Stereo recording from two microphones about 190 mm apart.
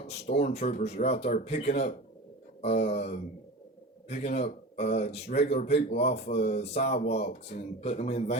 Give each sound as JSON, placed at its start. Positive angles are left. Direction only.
{"t": 0.5, "sound": "speech", "side_deg": 35}